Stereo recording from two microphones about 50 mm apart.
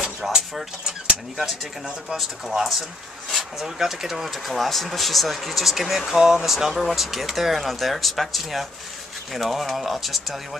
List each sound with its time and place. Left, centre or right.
0.0 s dishes: centre
1.3 s speech: centre